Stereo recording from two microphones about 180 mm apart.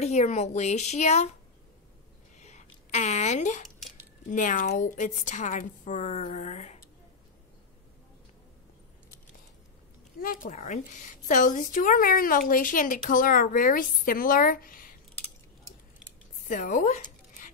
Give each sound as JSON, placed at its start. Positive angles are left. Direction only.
{"t": 0.0, "sound": "a woman's voice", "side_deg": 40}
{"t": 2.3, "sound": "a sound", "side_deg": 40}
{"t": 4.3, "sound": "a woman's voice", "side_deg": 45}
{"t": 10.2, "sound": "a woman's voice", "side_deg": 50}
{"t": 16.0, "sound": "scissors", "side_deg": 0}
{"t": 16.4, "sound": "zipper", "side_deg": 45}